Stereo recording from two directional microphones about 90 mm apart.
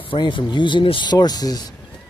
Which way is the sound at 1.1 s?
45° left (ahead or behind).